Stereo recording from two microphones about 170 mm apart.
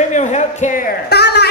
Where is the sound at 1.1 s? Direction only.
75° left (ahead or behind).